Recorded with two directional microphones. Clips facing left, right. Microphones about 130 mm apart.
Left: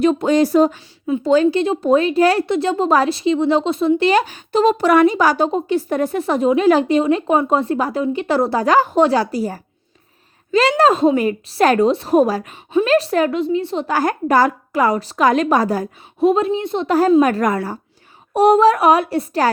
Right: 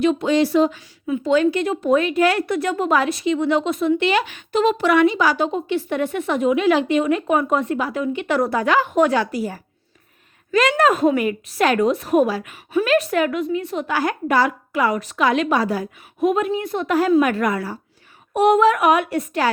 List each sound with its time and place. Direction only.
0.0 s speech: 40° left (ahead or behind)
1.0 s a woman's voice: 35° left (ahead or behind)
13.9 s a woman's voice: 40° left (ahead or behind)
16.3 s a woman's voice: 25° left (ahead or behind)
17.2 s a woman's voice: 40° left (ahead or behind)